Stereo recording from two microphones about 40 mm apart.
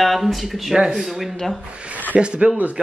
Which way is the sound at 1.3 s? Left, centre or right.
Centre.